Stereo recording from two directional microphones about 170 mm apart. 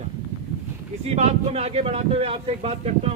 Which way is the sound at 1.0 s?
40° right (ahead or behind).